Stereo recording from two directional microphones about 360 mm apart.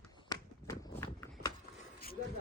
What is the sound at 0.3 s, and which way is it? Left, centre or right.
Run, centre.